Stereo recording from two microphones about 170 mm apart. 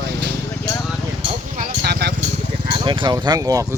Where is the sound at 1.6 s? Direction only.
70° right (ahead or behind).